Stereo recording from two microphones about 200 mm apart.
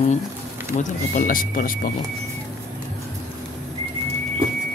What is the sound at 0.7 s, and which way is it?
Speech, 40° left (ahead or behind).